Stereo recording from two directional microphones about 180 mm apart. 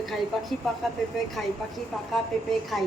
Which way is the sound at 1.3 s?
Centre (ahead or behind).